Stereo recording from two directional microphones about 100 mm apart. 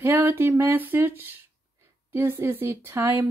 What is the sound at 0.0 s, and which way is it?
Speech, 25° right (ahead or behind).